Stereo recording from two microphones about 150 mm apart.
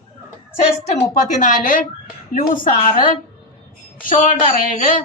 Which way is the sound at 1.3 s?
60° left (ahead or behind).